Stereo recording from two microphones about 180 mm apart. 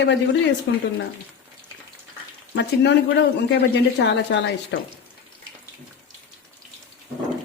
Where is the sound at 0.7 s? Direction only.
70° left (ahead or behind).